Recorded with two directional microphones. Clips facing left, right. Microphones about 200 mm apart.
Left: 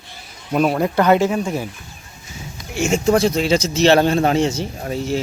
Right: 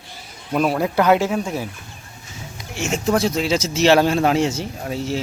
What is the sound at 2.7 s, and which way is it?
Speech, centre (ahead or behind).